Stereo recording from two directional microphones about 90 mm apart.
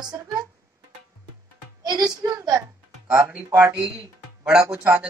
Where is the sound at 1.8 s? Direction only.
45° right (ahead or behind).